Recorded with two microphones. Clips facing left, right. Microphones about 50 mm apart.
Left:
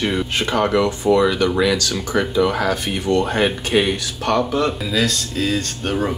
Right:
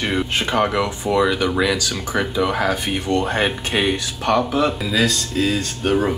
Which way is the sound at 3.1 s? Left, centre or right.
Right.